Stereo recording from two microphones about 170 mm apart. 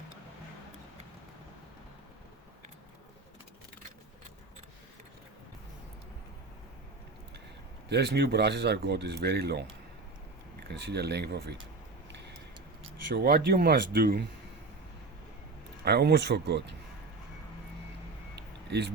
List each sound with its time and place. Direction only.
7.9 s speech: 75° right (ahead or behind)
13.1 s speech: 70° right (ahead or behind)
15.8 s speech: 70° right (ahead or behind)